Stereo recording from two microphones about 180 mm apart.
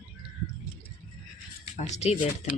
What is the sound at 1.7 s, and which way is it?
Speech, 40° left (ahead or behind).